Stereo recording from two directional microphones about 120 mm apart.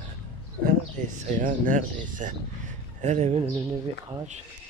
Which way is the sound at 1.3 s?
90° right.